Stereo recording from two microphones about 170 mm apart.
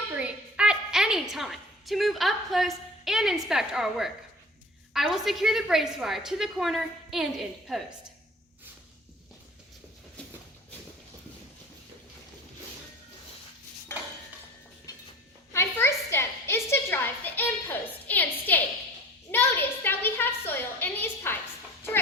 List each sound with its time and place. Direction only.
0.2 s a woman's voice: 5° right (ahead or behind)
13.9 s dishes: 15° left (ahead or behind)
15.5 s a sound: 15° left (ahead or behind)